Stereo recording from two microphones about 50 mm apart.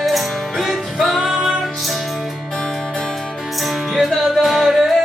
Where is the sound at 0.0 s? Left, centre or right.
Centre.